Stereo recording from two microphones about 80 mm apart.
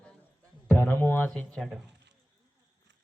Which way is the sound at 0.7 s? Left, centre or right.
Left.